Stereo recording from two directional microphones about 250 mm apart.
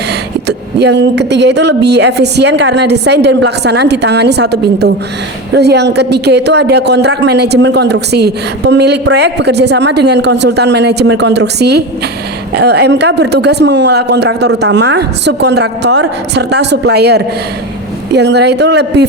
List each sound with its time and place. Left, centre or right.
0.4 s speech: right